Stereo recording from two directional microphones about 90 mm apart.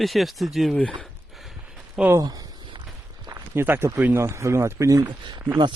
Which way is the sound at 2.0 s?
5° right (ahead or behind).